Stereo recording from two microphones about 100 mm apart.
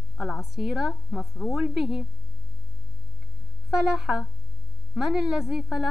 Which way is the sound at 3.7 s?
5° right (ahead or behind).